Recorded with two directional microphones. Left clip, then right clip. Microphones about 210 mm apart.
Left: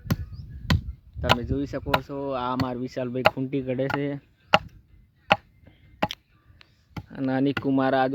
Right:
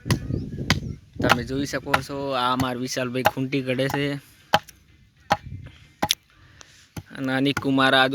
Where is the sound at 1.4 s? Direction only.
Centre (ahead or behind).